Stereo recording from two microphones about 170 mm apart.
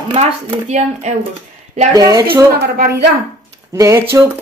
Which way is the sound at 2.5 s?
60° right (ahead or behind).